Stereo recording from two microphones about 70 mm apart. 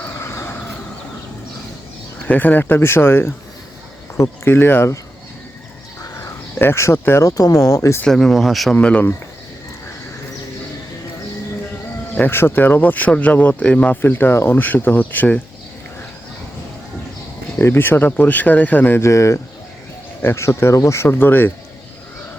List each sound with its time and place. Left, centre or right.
0.1 s a sound: left
2.2 s speech: left
4.4 s speech: left
6.1 s cricket: left
7.0 s speech: left
7.3 s speech: left
8.0 s speech: centre
8.7 s speech: centre
12.1 s speech: left
17.6 s speech: left
19.0 s speech: left
21.1 s speech: left